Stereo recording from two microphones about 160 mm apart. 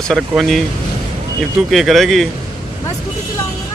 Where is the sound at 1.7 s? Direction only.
Centre (ahead or behind).